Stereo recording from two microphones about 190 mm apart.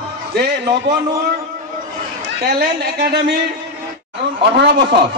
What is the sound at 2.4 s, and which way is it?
Speech, 55° right (ahead or behind).